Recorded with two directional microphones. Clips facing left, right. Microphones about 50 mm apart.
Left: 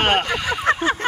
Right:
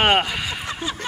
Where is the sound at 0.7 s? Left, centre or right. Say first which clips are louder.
Left 13 dB; left.